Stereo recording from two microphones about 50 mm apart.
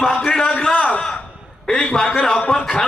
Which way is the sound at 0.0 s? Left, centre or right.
Centre.